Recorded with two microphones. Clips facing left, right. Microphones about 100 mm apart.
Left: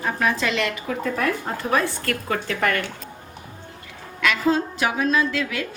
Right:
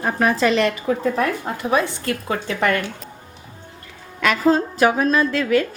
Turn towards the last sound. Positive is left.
turn(degrees=-40)  # may be behind; listen again after turning